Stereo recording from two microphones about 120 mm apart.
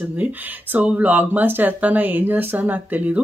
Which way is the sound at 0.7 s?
15° right (ahead or behind).